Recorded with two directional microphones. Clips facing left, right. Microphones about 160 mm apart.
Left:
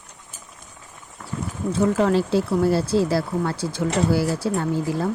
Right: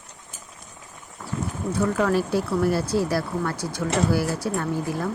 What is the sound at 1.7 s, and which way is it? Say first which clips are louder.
Speech: left 3 dB; 25° left (ahead or behind).